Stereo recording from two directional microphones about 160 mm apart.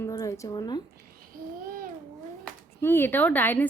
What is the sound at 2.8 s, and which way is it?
Speech, 15° left (ahead or behind).